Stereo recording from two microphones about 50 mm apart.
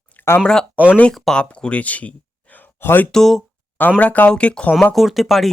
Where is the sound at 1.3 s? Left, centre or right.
Left.